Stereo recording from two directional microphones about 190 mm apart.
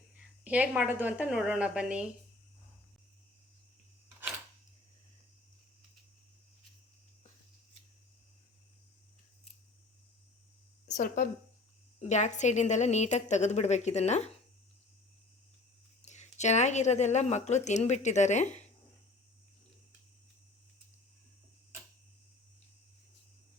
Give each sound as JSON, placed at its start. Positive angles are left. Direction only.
{"t": 0.2, "sound": "a woman's voice", "side_deg": -5}
{"t": 10.8, "sound": "a woman's voice", "side_deg": 40}
{"t": 16.0, "sound": "speech", "side_deg": 40}